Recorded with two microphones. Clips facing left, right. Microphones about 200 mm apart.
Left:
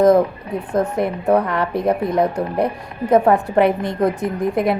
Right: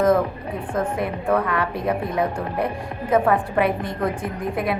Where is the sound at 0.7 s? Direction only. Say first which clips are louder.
Left 5 dB; 40° left (ahead or behind).